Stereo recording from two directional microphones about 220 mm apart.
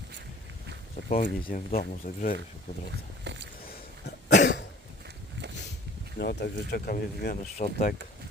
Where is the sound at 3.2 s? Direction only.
50° right (ahead or behind).